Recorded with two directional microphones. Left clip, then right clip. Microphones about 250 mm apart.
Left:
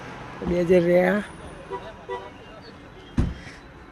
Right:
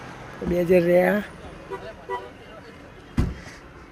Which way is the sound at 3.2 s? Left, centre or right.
Centre.